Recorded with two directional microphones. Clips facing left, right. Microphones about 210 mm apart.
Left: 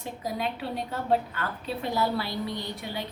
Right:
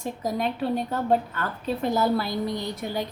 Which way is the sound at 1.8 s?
45° right (ahead or behind).